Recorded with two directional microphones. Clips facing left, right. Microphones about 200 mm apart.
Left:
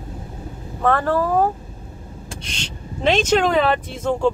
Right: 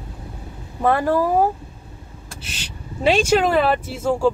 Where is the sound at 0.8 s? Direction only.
10° right (ahead or behind).